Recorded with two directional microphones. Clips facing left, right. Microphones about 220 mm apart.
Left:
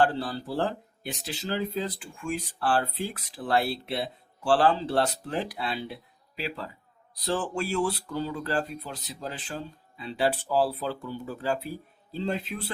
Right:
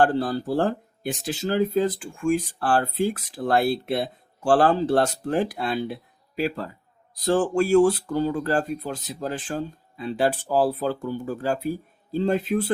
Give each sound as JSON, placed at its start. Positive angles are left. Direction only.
{"t": 0.0, "sound": "speech", "side_deg": -45}